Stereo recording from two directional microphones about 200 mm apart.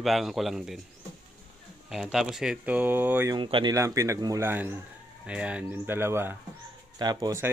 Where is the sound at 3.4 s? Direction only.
25° right (ahead or behind).